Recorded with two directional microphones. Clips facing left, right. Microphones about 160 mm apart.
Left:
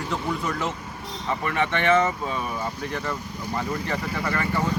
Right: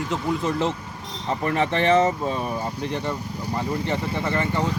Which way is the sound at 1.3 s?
35° right (ahead or behind).